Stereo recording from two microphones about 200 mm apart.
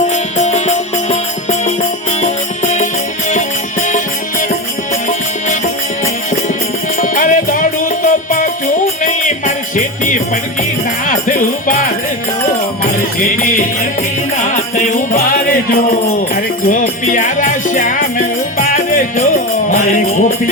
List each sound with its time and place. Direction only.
0.1 s music: 35° left (ahead or behind)
2.7 s music: 40° left (ahead or behind)
5.0 s music: 40° left (ahead or behind)
7.0 s music: 40° left (ahead or behind)